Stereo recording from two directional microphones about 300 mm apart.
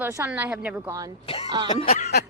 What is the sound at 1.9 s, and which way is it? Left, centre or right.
Speech, left.